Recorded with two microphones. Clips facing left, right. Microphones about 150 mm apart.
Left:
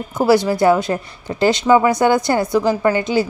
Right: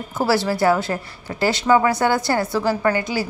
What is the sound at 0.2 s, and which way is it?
A woman's voice, 20° left (ahead or behind).